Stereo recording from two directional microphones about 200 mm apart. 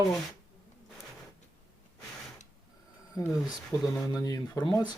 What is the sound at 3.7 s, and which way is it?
Speech, 20° left (ahead or behind).